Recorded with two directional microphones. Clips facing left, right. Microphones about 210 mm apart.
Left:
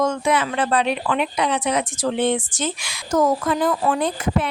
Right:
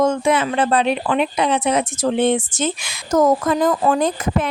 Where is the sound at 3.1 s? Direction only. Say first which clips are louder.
Right 3 dB; 45° right (ahead or behind).